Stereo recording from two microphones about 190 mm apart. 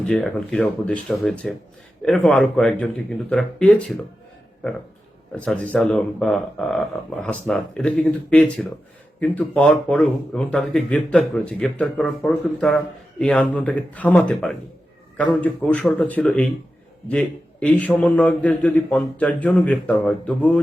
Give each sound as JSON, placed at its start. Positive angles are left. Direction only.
{"t": 0.0, "sound": "speech", "side_deg": 0}
{"t": 5.3, "sound": "a man's voice", "side_deg": 5}